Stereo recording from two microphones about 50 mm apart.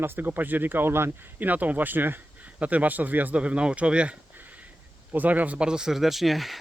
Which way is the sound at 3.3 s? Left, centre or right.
Right.